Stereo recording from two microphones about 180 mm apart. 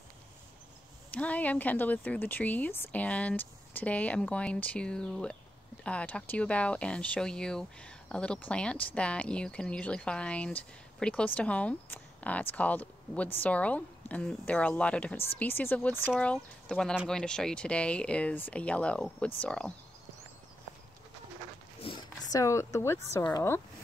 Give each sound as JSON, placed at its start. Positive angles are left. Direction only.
{"t": 1.1, "sound": "speech", "side_deg": 10}
{"t": 21.8, "sound": "speech", "side_deg": 25}